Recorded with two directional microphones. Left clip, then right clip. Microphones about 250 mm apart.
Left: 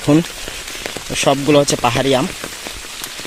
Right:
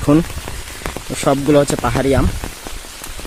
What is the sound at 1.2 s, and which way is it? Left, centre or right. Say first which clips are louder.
Speech: even; centre.